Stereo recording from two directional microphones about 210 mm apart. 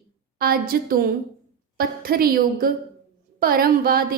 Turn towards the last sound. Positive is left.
turn(degrees=-45)  # may be behind; listen again after turning